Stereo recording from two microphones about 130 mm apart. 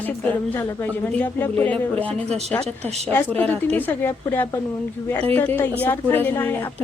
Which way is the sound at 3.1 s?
15° left (ahead or behind).